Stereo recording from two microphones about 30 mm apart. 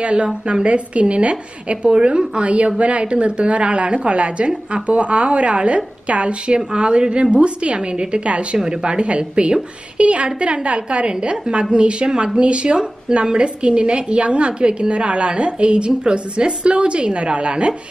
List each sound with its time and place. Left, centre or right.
0.0 s a woman's voice: right
2.0 s a woman's voice: right
2.4 s a woman's voice: right